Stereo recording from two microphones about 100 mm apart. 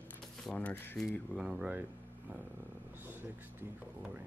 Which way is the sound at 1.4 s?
10° right (ahead or behind).